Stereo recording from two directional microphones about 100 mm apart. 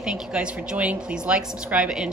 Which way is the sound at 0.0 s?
10° right (ahead or behind).